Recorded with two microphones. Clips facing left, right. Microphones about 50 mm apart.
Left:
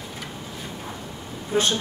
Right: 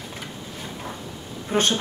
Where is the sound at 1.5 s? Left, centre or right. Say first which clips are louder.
Even; right.